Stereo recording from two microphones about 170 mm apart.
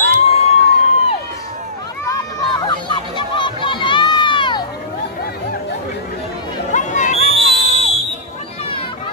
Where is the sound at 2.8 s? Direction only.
30° left (ahead or behind).